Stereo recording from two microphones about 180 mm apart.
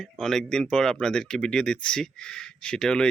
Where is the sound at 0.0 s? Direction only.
Centre (ahead or behind).